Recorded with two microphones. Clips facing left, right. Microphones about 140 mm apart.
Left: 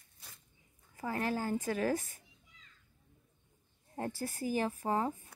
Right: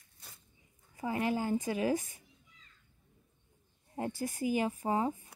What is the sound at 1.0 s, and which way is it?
Speech, 15° right (ahead or behind).